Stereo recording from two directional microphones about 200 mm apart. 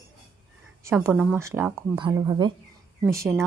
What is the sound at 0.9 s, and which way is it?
A woman's voice, 5° right (ahead or behind).